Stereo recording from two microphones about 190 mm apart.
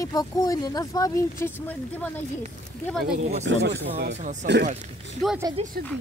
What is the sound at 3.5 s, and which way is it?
Speech, 70° right (ahead or behind).